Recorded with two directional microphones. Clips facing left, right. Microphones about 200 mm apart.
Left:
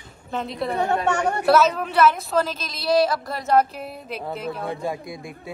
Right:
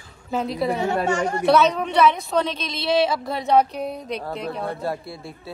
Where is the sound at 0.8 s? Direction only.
65° left (ahead or behind).